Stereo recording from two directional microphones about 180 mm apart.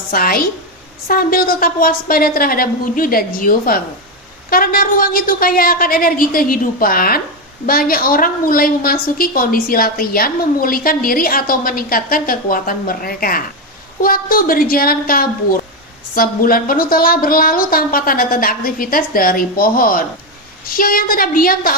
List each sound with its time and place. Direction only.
0.1 s a woman's voice: 55° left (ahead or behind)